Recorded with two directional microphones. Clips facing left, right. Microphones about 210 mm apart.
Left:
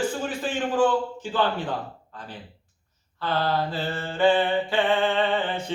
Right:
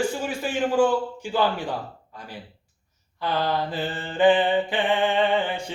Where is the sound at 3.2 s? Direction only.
15° right (ahead or behind).